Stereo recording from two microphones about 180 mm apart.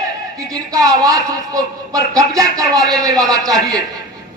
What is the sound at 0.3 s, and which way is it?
Speech, 20° right (ahead or behind).